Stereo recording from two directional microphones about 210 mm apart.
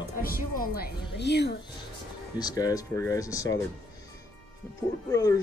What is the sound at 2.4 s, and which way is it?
Speech, 20° left (ahead or behind).